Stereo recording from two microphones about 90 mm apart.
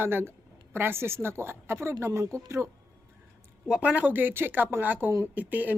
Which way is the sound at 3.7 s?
15° right (ahead or behind).